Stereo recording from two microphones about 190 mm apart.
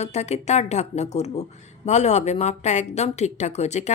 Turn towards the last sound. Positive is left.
turn(degrees=35)  # may be behind; listen again after turning